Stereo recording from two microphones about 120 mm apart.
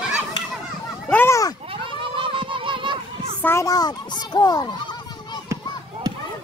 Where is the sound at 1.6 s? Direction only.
50° right (ahead or behind).